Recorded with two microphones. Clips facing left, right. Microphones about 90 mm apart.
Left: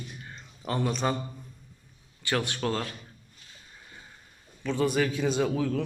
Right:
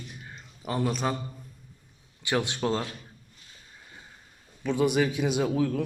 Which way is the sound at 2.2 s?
20° right (ahead or behind).